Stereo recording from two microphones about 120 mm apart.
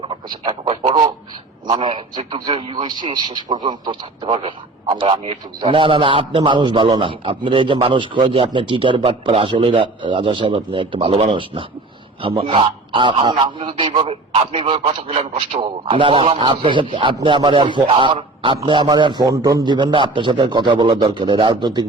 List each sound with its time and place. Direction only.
0.0 s speech: 45° right (ahead or behind)
1.6 s a man's voice: 40° right (ahead or behind)